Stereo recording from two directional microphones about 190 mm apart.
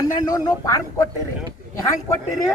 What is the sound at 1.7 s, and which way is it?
Speech, 15° left (ahead or behind).